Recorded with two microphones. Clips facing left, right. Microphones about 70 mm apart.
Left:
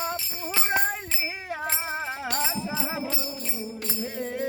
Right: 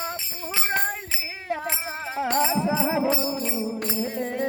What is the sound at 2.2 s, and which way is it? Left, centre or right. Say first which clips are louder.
Music: right 7 dB; right.